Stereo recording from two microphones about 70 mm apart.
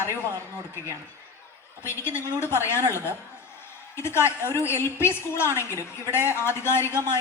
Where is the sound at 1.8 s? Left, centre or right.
Left.